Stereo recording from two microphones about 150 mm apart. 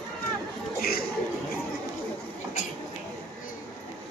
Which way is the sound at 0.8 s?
90° left.